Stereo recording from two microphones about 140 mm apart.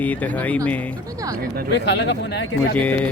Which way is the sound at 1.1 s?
25° right (ahead or behind).